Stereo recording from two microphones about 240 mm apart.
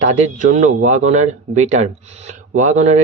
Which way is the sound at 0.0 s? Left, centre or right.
Right.